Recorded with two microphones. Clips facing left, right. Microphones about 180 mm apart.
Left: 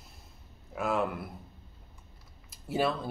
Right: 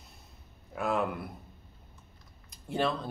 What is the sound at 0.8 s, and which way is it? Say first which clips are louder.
Speech: even; centre (ahead or behind).